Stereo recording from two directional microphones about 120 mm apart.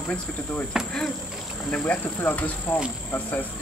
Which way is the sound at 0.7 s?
5° right (ahead or behind).